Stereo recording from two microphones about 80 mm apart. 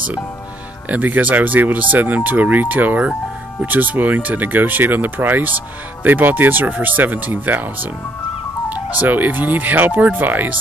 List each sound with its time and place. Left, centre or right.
0.8 s speech: right
9.0 s speech: right